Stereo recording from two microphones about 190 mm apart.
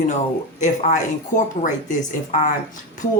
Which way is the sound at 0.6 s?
40° left (ahead or behind).